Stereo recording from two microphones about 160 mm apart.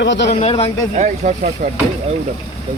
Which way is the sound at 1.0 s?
50° right (ahead or behind).